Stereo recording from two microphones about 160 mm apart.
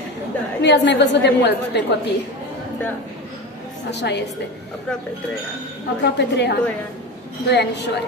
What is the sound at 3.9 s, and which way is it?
Speech, 90° left.